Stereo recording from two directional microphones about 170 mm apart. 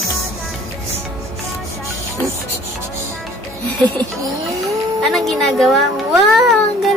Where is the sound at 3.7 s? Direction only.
5° left (ahead or behind).